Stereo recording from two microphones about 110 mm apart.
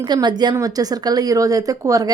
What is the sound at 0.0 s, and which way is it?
A woman's voice, 40° right (ahead or behind).